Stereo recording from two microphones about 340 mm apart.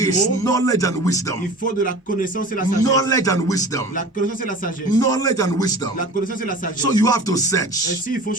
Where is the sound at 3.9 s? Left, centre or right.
Left.